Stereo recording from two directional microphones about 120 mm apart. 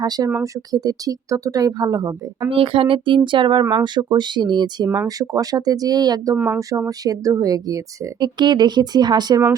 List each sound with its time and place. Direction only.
0.0 s speech: 35° right (ahead or behind)
2.5 s speech: 50° right (ahead or behind)
6.3 s speech: 15° right (ahead or behind)
6.6 s speech: 25° right (ahead or behind)